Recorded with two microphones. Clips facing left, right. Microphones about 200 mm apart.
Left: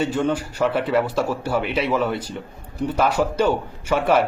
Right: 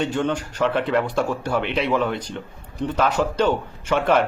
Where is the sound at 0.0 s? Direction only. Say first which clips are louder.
Left 1 dB; 5° left (ahead or behind).